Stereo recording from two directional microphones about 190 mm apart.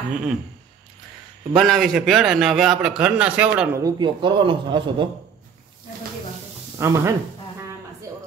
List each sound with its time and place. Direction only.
0.1 s a man's voice: 5° right (ahead or behind)
1.5 s a man's voice: centre (ahead or behind)
3.8 s a man's voice: 25° right (ahead or behind)
6.8 s speech: 15° right (ahead or behind)